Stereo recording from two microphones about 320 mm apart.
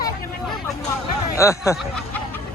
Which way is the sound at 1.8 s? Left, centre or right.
Centre.